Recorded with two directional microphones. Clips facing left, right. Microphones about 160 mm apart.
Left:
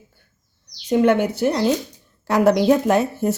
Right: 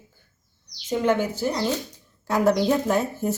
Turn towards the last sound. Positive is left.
turn(degrees=75)  # may be behind; listen again after turning